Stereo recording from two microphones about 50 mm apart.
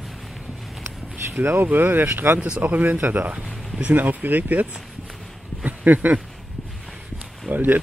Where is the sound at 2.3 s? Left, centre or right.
Centre.